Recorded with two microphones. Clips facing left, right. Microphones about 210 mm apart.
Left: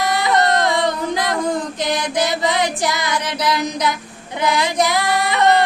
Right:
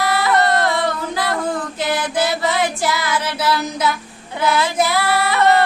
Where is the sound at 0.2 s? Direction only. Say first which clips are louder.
Even; 20° left (ahead or behind).